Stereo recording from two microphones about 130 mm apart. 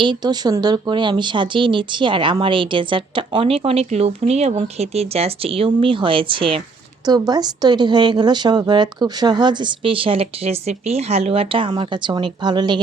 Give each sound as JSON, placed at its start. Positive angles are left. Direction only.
{"t": 0.0, "sound": "speech", "side_deg": -35}
{"t": 7.0, "sound": "speech", "side_deg": -30}